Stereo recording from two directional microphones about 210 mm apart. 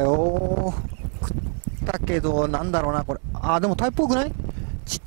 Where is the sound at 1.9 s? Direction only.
15° right (ahead or behind).